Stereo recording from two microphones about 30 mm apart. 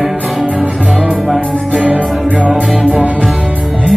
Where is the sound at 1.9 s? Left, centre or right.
Right.